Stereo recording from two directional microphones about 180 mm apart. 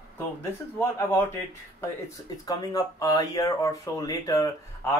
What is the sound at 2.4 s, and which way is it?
Speech, 20° left (ahead or behind).